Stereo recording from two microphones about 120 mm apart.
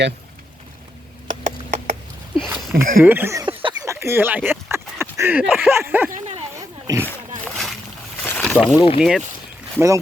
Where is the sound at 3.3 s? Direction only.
40° right (ahead or behind).